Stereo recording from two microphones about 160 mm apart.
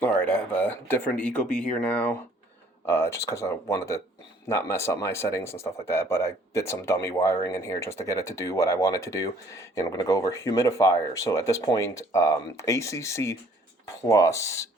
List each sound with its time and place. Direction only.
0.0 s speech: 10° left (ahead or behind)